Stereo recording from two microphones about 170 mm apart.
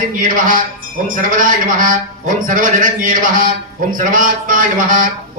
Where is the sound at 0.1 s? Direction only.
50° right (ahead or behind).